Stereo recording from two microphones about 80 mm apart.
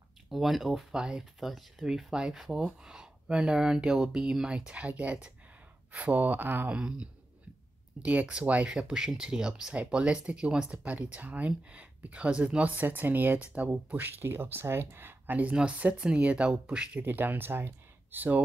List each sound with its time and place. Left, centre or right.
0.3 s speech: centre; by 6.8 s right
8.0 s speech: centre
17.0 s speech: right